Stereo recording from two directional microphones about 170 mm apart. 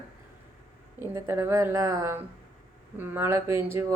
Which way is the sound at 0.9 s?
15° right (ahead or behind).